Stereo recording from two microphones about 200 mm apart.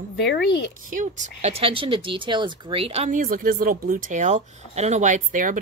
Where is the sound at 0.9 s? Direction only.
40° right (ahead or behind).